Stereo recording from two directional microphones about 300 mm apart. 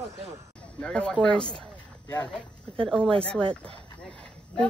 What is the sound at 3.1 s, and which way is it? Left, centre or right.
Speech, centre.